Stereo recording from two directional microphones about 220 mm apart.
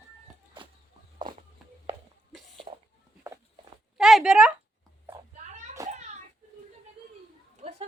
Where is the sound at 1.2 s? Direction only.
20° right (ahead or behind).